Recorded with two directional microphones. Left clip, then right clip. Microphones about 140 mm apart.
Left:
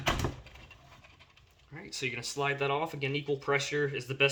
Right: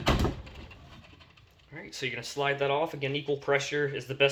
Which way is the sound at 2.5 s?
55° left (ahead or behind).